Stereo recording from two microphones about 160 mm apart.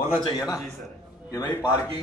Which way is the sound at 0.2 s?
25° left (ahead or behind).